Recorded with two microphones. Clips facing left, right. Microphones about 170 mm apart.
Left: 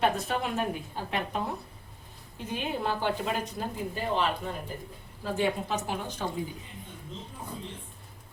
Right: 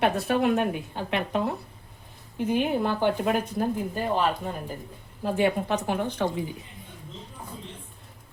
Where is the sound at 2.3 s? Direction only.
55° right (ahead or behind).